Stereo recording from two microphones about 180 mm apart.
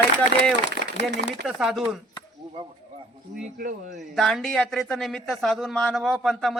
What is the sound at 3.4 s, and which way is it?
Speech, 45° right (ahead or behind).